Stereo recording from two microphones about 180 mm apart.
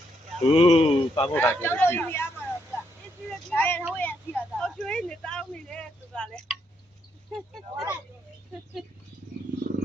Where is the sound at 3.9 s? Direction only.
10° left (ahead or behind).